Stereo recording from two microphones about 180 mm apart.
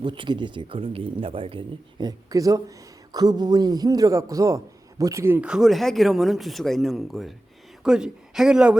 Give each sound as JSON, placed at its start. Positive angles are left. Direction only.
{"t": 0.0, "sound": "speech", "side_deg": -25}